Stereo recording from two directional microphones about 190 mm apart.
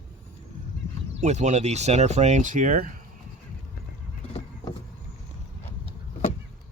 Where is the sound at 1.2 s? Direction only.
35° right (ahead or behind).